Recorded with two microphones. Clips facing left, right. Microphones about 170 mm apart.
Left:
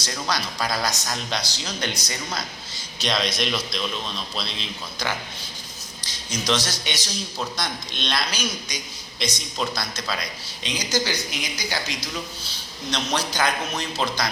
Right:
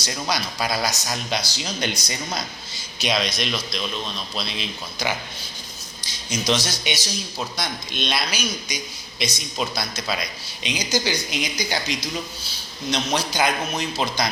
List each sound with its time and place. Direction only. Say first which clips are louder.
0.0 s a man's voice: right 1 dB; 10° right (ahead or behind)
3.0 s a man's voice: right 1 dB; 5° right (ahead or behind)
6.4 s a man's voice: right 1 dB; 10° right (ahead or behind)